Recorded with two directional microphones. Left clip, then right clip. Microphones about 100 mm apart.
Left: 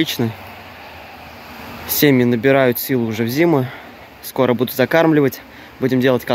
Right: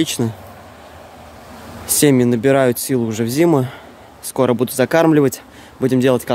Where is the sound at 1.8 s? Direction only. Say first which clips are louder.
Even; 25° right (ahead or behind).